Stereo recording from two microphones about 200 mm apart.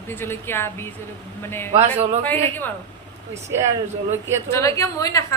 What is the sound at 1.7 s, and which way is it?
Speech, 35° right (ahead or behind).